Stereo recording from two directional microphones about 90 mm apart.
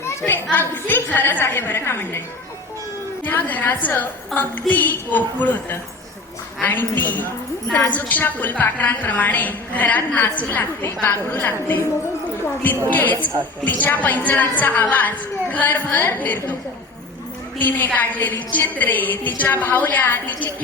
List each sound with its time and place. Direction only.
0.0 s a sound: 25° left (ahead or behind)
0.5 s a woman's voice: 20° left (ahead or behind)
3.2 s a woman's voice: 20° left (ahead or behind)
4.3 s a woman's voice: centre (ahead or behind)
4.7 s a woman's voice: 20° left (ahead or behind)
12.9 s a woman's voice: 20° left (ahead or behind)
17.6 s a woman's voice: 20° left (ahead or behind)